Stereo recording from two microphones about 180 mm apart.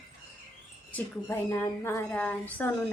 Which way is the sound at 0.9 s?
10° left (ahead or behind).